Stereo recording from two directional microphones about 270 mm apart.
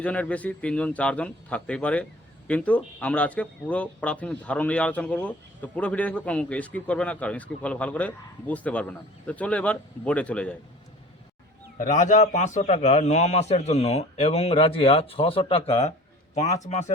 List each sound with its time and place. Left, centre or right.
0.0 s speech: centre
11.8 s a man's voice: left